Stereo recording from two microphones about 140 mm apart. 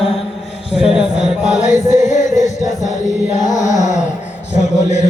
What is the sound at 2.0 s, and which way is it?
Chant, 60° left (ahead or behind).